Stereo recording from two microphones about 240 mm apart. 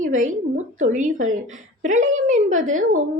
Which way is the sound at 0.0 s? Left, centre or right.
Right.